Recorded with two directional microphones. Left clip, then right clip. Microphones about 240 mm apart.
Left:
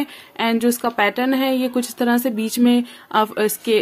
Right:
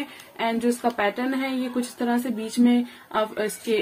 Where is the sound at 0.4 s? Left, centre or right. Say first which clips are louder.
Left 5 dB; left.